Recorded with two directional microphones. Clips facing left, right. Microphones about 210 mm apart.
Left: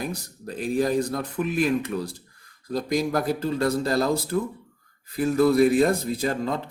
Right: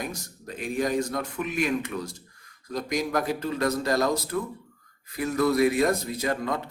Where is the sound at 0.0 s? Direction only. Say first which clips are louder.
Left 3 dB; 35° left (ahead or behind).